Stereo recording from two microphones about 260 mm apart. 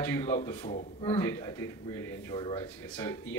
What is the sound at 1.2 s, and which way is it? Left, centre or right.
Speech, centre.